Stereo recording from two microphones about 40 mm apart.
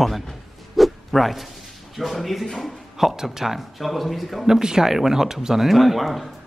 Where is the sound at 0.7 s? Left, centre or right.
Centre.